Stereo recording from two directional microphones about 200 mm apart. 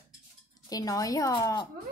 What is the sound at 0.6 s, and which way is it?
A woman's voice, 20° left (ahead or behind).